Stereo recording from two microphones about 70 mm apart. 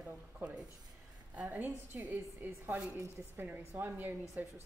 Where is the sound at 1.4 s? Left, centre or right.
Right.